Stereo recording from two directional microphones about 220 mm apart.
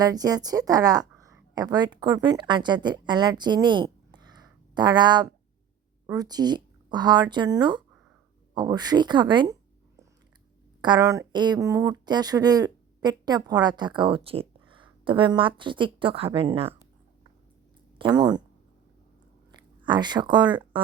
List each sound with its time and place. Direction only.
0.0 s speech: 15° right (ahead or behind)
10.8 s speech: 20° right (ahead or behind)
17.9 s speech: 20° right (ahead or behind)
19.8 s speech: 20° right (ahead or behind)